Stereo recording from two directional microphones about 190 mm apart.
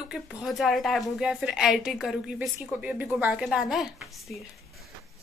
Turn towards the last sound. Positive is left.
turn(degrees=0)  # may be behind; listen again after turning